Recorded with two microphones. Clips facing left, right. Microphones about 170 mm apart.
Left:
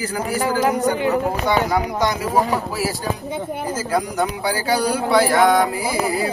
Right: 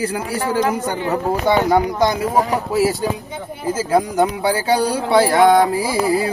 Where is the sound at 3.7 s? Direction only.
25° right (ahead or behind).